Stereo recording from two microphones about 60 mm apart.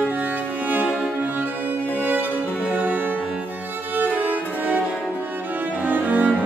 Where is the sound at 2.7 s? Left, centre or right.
Right.